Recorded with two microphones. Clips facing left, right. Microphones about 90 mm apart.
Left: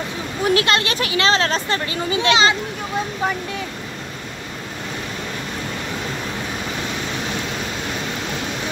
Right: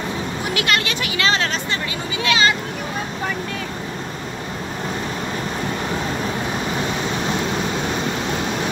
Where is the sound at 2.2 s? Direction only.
20° left (ahead or behind).